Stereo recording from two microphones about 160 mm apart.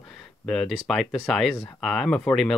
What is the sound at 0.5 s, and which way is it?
Speech, centre (ahead or behind).